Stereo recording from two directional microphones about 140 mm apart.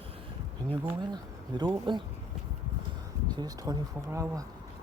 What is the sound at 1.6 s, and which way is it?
Speech, 35° right (ahead or behind).